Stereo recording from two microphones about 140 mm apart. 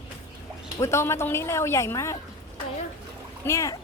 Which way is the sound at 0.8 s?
20° left (ahead or behind).